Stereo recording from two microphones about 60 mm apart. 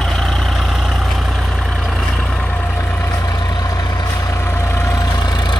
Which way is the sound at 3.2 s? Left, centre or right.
Left.